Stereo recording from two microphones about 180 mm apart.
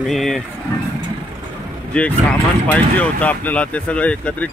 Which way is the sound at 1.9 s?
5° left (ahead or behind).